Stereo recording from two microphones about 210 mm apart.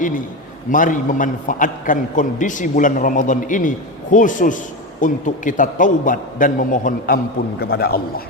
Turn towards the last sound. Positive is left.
turn(degrees=45)  # may be behind; listen again after turning